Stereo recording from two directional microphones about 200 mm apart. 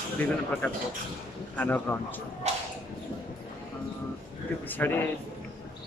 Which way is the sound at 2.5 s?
35° right (ahead or behind).